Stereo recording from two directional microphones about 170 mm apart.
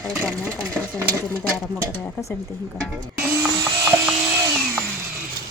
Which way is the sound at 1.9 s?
15° left (ahead or behind).